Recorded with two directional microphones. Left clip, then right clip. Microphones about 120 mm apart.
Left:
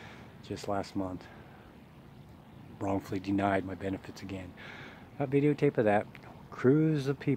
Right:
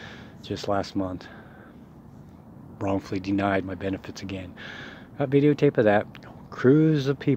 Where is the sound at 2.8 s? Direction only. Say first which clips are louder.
Right 6 dB; 10° left (ahead or behind).